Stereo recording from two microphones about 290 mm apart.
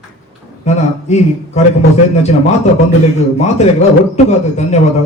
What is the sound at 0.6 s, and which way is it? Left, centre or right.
A man's voice, left.